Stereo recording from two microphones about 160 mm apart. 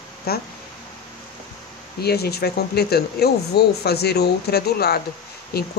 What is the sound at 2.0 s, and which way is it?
Speech, 80° left.